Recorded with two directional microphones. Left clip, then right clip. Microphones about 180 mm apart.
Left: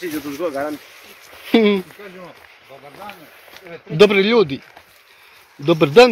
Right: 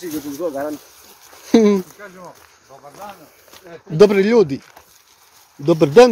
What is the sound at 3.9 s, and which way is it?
Speech, 35° right (ahead or behind).